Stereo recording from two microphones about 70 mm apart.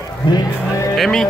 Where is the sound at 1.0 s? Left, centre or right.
Centre.